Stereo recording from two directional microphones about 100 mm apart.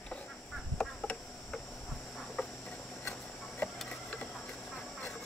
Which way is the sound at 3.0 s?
20° left (ahead or behind).